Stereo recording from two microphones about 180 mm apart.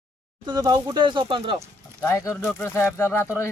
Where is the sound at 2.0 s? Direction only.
15° left (ahead or behind).